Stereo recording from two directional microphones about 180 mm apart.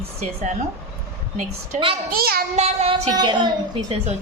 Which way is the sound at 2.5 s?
35° right (ahead or behind).